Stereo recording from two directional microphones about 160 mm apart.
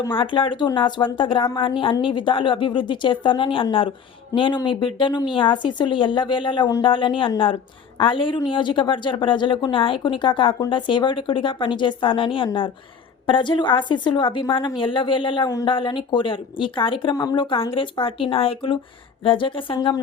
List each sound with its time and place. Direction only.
0.1 s a woman's voice: 30° left (ahead or behind)